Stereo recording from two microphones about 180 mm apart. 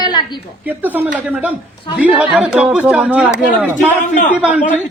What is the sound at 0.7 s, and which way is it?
Speech, 10° right (ahead or behind).